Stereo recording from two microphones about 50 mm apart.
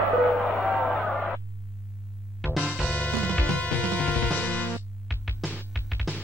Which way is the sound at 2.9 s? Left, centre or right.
Left.